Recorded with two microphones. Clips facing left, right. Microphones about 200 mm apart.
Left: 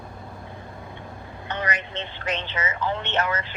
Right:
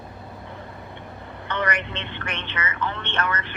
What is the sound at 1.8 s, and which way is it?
Telephone, 65° right (ahead or behind).